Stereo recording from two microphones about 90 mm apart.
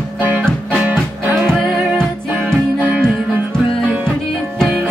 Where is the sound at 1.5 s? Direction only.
5° left (ahead or behind).